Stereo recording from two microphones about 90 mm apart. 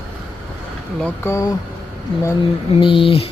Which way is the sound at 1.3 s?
35° left (ahead or behind).